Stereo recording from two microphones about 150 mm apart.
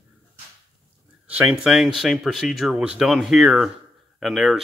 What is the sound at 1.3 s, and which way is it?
Speech, 10° right (ahead or behind).